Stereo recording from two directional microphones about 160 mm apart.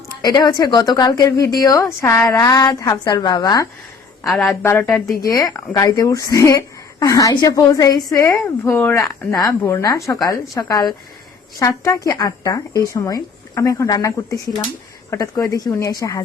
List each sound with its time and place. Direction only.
0.2 s a woman's voice: 25° left (ahead or behind)
4.3 s a woman's voice: centre (ahead or behind)
4.6 s speech: 15° left (ahead or behind)
4.9 s a woman's voice: 5° left (ahead or behind)
5.2 s a woman's voice: 25° left (ahead or behind)